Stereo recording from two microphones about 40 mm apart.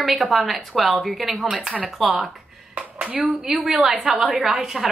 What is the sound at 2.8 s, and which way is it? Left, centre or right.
Speech, right.